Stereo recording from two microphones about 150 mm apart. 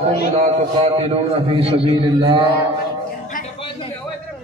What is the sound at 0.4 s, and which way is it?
A man's voice, 50° right (ahead or behind).